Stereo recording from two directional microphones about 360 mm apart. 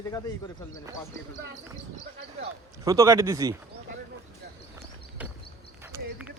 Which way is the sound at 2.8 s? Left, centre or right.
Centre.